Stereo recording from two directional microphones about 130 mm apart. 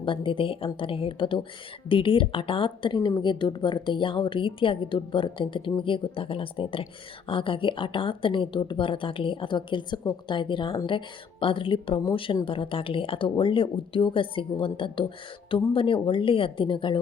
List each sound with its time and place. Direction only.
0.0 s a woman's voice: 40° left (ahead or behind)